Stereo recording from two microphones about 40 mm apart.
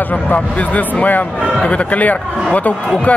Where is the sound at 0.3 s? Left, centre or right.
Left.